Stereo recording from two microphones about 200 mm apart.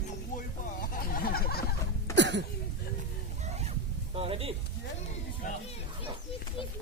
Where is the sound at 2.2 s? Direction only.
60° right (ahead or behind).